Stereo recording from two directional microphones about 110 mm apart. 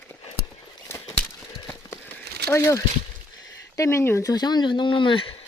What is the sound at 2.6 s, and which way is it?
Speech, 20° left (ahead or behind).